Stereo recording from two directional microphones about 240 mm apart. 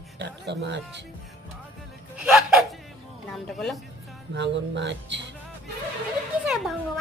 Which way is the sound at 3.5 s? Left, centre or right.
Centre.